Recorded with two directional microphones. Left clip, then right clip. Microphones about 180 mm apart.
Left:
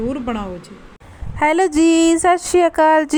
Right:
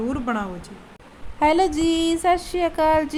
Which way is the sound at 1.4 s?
45° left (ahead or behind).